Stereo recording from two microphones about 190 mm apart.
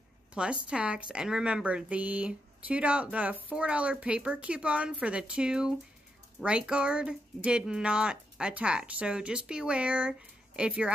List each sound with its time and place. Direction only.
0.3 s a woman's voice: 5° right (ahead or behind)